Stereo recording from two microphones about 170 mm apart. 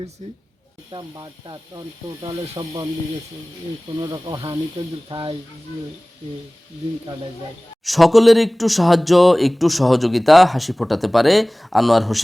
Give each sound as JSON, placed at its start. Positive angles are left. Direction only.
{"t": 0.9, "sound": "speech", "side_deg": -25}
{"t": 4.0, "sound": "speech", "side_deg": -25}
{"t": 7.9, "sound": "speech", "side_deg": 0}